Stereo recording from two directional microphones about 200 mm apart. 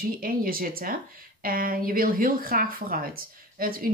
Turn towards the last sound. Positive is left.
turn(degrees=-45)  # may be behind; listen again after turning